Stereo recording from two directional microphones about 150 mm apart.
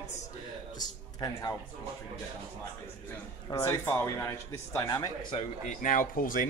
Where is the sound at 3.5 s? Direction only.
20° left (ahead or behind).